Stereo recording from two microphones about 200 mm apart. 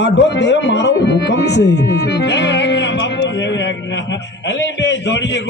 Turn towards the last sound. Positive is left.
turn(degrees=60)  # may be behind; listen again after turning